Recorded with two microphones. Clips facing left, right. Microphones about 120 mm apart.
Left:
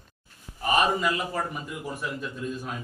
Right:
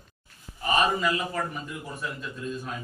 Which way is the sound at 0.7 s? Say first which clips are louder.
Left 1 dB; 15° left (ahead or behind).